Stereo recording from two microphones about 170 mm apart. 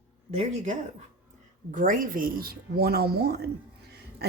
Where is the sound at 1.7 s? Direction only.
50° right (ahead or behind); by 3.4 s 65° right (ahead or behind).